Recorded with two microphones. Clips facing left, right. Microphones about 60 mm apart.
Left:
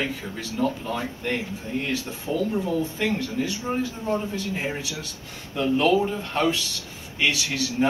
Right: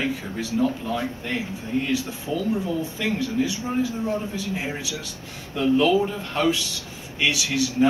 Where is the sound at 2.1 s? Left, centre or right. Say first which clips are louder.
Even; left.